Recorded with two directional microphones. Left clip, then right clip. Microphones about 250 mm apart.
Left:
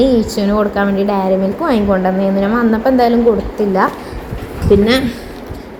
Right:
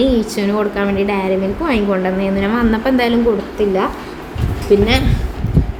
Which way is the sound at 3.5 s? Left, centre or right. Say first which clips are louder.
Left 2 dB; centre.